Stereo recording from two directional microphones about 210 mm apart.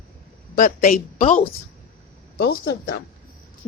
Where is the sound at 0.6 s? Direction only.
40° left (ahead or behind).